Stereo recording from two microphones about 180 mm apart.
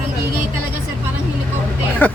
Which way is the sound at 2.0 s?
10° left (ahead or behind).